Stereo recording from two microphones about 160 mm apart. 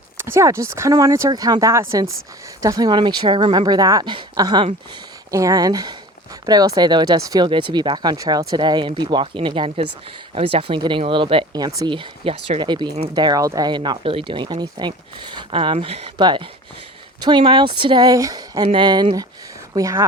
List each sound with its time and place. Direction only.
0.2 s speech: 15° right (ahead or behind)